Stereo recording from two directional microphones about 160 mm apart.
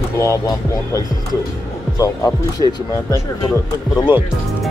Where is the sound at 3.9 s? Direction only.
30° left (ahead or behind).